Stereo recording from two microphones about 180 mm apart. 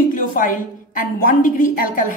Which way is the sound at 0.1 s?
50° left (ahead or behind).